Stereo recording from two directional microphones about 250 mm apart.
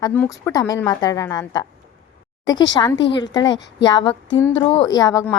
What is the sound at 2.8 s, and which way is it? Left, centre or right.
Speech, centre.